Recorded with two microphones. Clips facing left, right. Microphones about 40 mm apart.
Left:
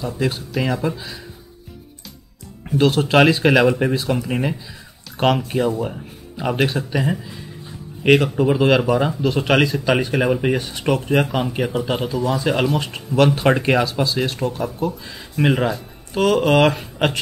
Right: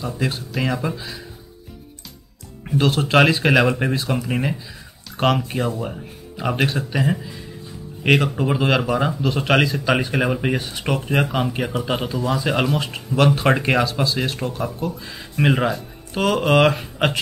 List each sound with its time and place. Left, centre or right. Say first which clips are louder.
0.2 s speech: left 2 dB; centre
2.8 s speech: left 2 dB; centre